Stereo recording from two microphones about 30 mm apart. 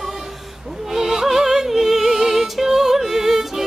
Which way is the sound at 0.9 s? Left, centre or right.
Centre.